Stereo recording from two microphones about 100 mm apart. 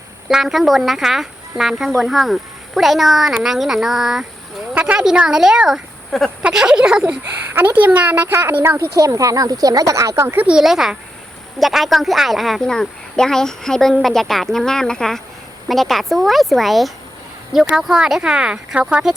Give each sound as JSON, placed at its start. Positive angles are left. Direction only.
{"t": 0.3, "sound": "speech", "side_deg": -5}
{"t": 4.7, "sound": "speech", "side_deg": -15}
{"t": 6.4, "sound": "speech", "side_deg": -10}
{"t": 7.1, "sound": "speech", "side_deg": -20}
{"t": 8.8, "sound": "speech", "side_deg": -30}
{"t": 10.5, "sound": "speech", "side_deg": -5}